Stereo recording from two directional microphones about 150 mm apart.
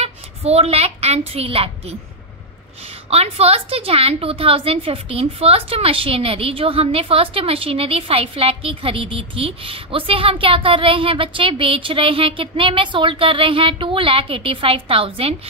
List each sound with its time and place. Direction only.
0.0 s a woman's voice: 45° right (ahead or behind)
3.1 s a woman's voice: 45° right (ahead or behind)